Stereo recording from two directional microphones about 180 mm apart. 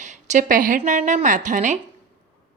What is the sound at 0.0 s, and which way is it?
A woman's voice, 40° right (ahead or behind).